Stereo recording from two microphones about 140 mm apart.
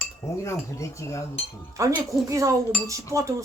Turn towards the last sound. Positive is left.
turn(degrees=-25)  # may be behind; listen again after turning